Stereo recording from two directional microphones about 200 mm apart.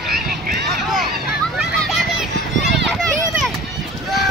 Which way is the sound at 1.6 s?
Centre (ahead or behind).